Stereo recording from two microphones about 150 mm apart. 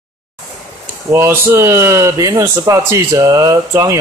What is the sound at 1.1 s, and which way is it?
Speech, 15° right (ahead or behind).